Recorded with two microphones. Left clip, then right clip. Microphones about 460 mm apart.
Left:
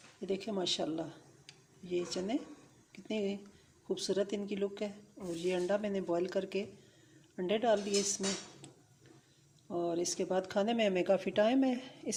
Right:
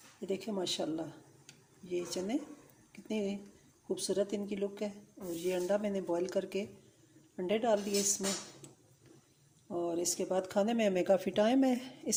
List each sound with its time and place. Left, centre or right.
0.2 s speech: left
2.9 s a sound: left
3.8 s speech: left
9.6 s speech: left